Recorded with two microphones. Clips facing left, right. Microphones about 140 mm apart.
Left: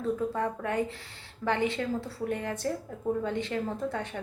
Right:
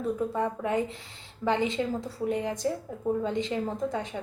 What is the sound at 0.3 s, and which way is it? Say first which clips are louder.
A woman's voice: right 2 dB; 15° right (ahead or behind).